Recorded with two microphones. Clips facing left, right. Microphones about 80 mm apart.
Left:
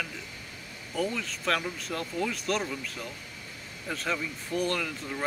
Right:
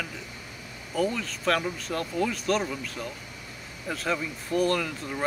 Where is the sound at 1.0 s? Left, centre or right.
Centre.